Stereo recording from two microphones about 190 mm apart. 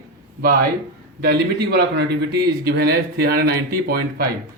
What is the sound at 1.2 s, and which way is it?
A man's voice, 60° right (ahead or behind).